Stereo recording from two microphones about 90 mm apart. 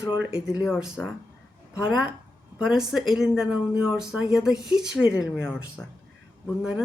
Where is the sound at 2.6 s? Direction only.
5° right (ahead or behind).